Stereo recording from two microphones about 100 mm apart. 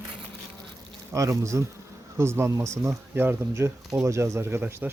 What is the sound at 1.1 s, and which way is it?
Speech, 30° right (ahead or behind).